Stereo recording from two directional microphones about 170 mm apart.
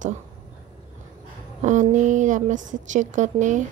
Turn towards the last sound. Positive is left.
turn(degrees=-45)  # may be behind; listen again after turning